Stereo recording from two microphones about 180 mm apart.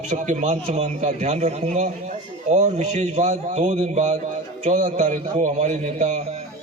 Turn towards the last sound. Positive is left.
turn(degrees=-40)  # may be behind; listen again after turning